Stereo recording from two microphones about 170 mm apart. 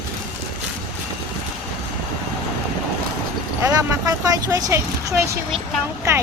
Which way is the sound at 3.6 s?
20° right (ahead or behind).